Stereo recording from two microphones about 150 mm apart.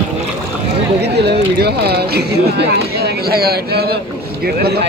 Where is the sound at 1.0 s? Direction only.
90° right.